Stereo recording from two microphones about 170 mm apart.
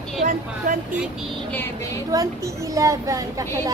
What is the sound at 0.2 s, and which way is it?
Speech, 55° right (ahead or behind).